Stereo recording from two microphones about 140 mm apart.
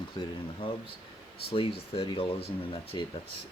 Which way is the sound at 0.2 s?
35° left (ahead or behind).